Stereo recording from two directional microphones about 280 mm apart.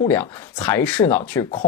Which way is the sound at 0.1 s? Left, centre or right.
Centre.